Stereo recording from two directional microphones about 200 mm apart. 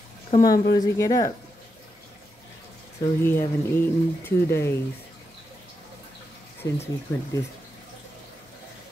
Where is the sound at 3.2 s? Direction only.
10° left (ahead or behind).